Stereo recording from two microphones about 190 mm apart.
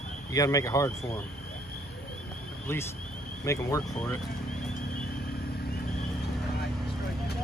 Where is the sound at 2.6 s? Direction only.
15° left (ahead or behind).